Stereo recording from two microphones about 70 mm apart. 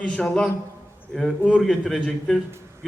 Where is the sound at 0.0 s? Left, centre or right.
Centre.